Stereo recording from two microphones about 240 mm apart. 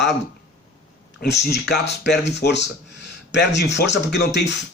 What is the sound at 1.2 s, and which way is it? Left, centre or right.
Speech, left.